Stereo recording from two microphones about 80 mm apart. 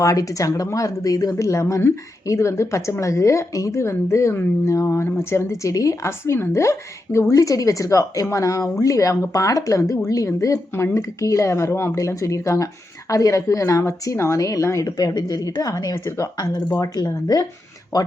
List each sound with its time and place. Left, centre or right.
0.0 s a woman's voice: left
14.9 s a woman's voice: left